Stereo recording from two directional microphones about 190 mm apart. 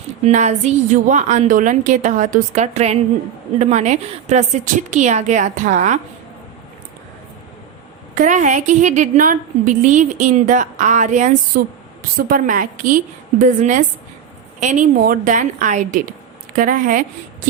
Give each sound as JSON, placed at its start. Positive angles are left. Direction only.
{"t": 0.3, "sound": "a woman's voice", "side_deg": -40}
{"t": 8.1, "sound": "a woman's voice", "side_deg": -40}